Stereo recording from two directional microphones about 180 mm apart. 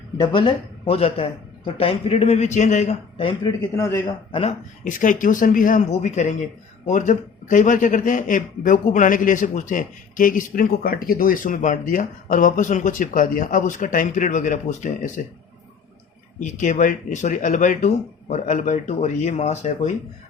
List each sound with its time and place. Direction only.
0.2 s speech: 30° left (ahead or behind)
3.8 s a man's voice: 15° left (ahead or behind)
4.3 s speech: 30° left (ahead or behind)
4.8 s a man's voice: 45° left (ahead or behind)
16.4 s a man's voice: 45° left (ahead or behind)